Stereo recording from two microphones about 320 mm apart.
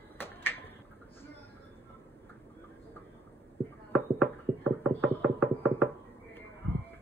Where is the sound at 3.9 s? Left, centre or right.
Centre.